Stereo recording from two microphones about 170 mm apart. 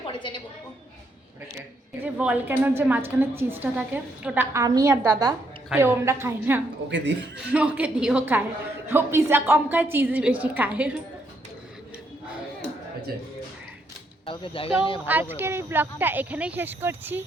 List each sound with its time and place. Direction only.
0.0 s a woman's voice: 30° left (ahead or behind)
2.0 s a woman's voice: 10° right (ahead or behind)
4.5 s a woman's voice: 20° right (ahead or behind)
6.8 s a man's voice: 90° right
7.5 s a woman's voice: 10° right (ahead or behind)
14.3 s speech: 30° left (ahead or behind)
15.0 s a woman's voice: 10° right (ahead or behind)